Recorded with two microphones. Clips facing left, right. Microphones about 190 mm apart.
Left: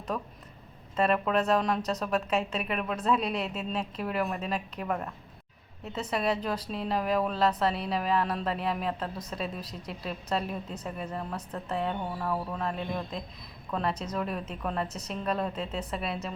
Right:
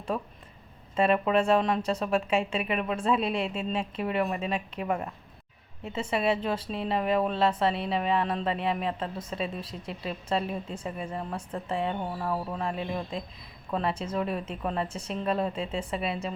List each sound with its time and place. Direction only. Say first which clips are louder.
0.9 s a woman's voice: right 2 dB; centre (ahead or behind)
14.8 s a woman's voice: right 2 dB; 30° right (ahead or behind)
15.1 s a woman's voice: right 3 dB; centre (ahead or behind)